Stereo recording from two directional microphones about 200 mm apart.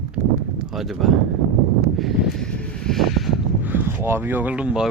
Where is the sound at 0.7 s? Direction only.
Centre (ahead or behind).